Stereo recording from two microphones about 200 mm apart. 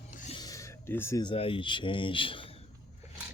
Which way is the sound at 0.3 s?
20° left (ahead or behind).